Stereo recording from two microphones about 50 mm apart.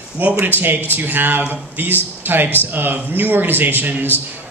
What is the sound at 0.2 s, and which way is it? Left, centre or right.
Speech, right.